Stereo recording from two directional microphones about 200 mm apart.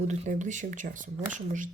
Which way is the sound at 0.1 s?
40° right (ahead or behind).